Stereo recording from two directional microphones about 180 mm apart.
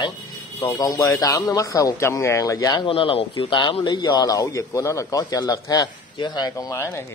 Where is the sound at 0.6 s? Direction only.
20° left (ahead or behind).